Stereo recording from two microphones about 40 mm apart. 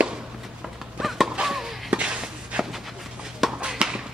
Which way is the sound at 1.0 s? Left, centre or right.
Centre.